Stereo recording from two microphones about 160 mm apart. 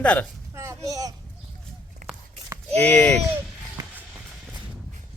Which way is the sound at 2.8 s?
10° left (ahead or behind).